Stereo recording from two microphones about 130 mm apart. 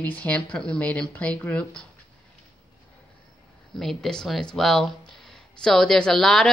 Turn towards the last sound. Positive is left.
turn(degrees=5)  # may be behind; listen again after turning